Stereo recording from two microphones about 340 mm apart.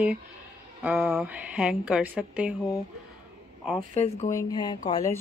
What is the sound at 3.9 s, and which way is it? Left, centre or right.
Speech, centre.